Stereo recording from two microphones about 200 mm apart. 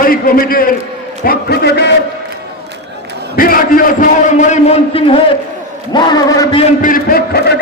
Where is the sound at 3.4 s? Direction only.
45° left (ahead or behind); by 5.2 s 30° left (ahead or behind).